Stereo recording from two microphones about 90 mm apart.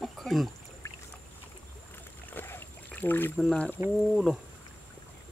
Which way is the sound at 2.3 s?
25° left (ahead or behind).